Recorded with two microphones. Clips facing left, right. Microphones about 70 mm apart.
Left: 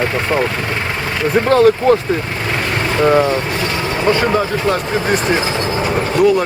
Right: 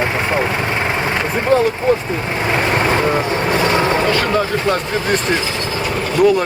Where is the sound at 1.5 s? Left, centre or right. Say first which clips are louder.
Left 4 dB; left.